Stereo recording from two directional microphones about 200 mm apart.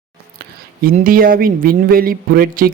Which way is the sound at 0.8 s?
45° right (ahead or behind).